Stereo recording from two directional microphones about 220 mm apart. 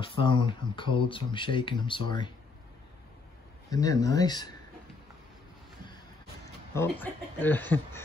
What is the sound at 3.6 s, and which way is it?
Speech, 15° left (ahead or behind).